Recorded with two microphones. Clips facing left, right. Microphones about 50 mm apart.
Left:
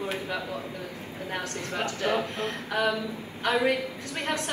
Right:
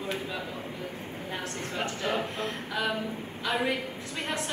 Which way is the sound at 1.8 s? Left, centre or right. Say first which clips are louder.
Left 3 dB; left.